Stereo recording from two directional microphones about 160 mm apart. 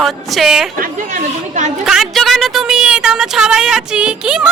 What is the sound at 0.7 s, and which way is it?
Speech, 55° right (ahead or behind).